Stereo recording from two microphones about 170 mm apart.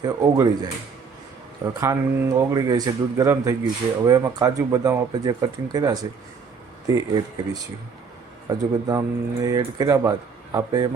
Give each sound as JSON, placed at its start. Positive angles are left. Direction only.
{"t": 0.0, "sound": "speech", "side_deg": -20}
{"t": 1.8, "sound": "speech", "side_deg": -20}